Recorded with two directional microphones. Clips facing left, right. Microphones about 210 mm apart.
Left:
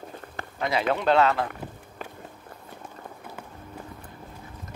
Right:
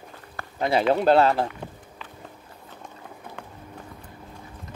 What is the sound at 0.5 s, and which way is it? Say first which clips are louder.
Speech: right 4 dB; 30° right (ahead or behind).